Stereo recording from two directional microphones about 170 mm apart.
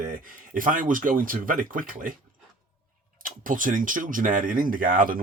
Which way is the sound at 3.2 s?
55° right (ahead or behind).